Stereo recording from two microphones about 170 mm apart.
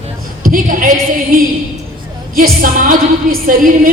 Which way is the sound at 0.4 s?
50° right (ahead or behind).